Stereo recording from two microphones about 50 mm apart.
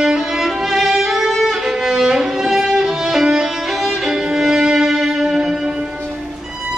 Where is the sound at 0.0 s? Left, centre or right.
Centre.